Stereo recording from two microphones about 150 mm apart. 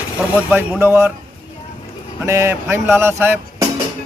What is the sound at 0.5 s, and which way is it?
Speech, 15° right (ahead or behind).